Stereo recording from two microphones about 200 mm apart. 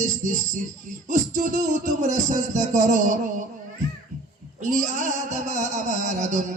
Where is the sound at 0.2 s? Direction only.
40° right (ahead or behind).